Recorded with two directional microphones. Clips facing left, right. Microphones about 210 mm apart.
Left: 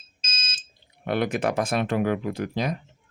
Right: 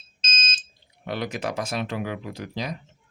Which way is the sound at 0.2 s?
10° left (ahead or behind).